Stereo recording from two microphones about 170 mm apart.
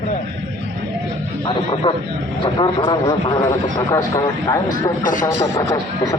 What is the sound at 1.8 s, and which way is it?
Speech, 30° left (ahead or behind).